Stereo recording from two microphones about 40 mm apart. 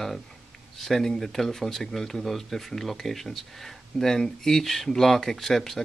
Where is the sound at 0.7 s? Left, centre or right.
Centre.